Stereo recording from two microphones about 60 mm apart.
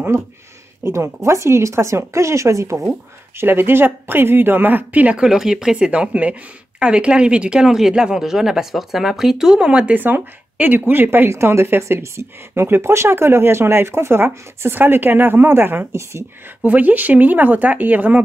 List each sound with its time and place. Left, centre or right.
0.1 s speech: right
3.3 s speech: right
5.1 s speech: centre
9.9 s speech: right
16.0 s speech: right
16.4 s speech: right